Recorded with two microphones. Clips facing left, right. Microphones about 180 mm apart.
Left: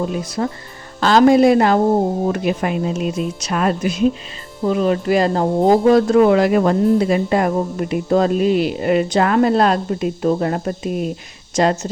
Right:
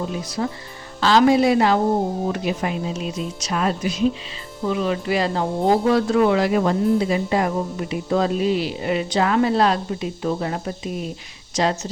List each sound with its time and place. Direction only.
0.4 s speech: 50° left (ahead or behind)